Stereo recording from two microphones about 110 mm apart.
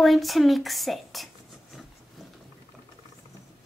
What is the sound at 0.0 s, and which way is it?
A woman's voice, centre (ahead or behind).